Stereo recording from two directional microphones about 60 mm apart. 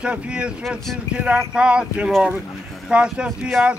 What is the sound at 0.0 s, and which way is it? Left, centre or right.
Speech, centre.